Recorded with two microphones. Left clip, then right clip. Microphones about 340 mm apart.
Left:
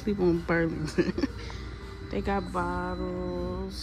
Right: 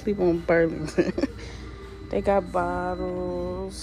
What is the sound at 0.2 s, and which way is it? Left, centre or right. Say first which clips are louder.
Speech: right 5 dB; centre.